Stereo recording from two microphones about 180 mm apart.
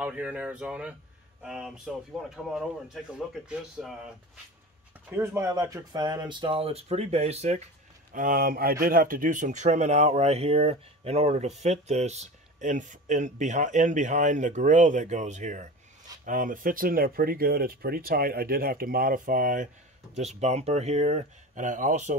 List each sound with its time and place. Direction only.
0.0 s speech: 5° right (ahead or behind)
5.1 s speech: 15° right (ahead or behind); by 7.6 s 35° right (ahead or behind)
8.1 s speech: 50° right (ahead or behind)